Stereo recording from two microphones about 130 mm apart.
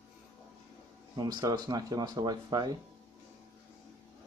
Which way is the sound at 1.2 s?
30° right (ahead or behind).